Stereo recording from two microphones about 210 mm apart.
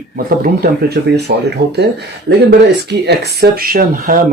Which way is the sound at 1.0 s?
50° right (ahead or behind).